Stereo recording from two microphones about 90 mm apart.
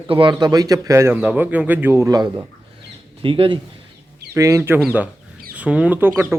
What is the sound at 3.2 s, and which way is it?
Speech, 80° right.